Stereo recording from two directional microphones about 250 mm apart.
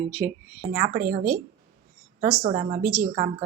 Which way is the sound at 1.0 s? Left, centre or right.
Right.